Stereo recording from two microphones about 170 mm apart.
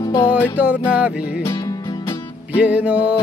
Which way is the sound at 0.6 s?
10° right (ahead or behind).